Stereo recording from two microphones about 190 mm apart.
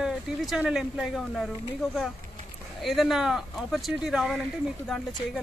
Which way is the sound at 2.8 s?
Centre (ahead or behind).